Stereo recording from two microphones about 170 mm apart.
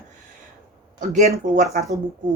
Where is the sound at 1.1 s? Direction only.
55° right (ahead or behind).